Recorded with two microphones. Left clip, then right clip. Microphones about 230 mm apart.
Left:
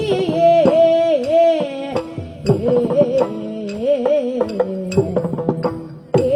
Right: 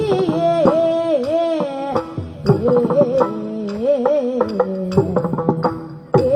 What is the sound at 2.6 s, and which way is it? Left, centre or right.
Music, right.